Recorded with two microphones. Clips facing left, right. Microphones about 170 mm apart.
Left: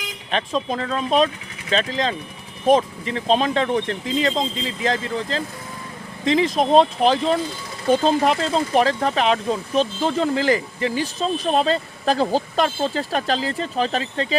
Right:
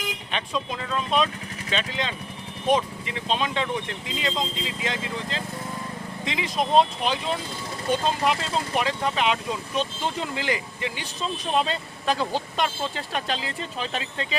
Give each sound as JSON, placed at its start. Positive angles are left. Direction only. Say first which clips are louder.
{"t": 0.3, "sound": "speech", "louder": "left 8 dB", "side_deg": 40}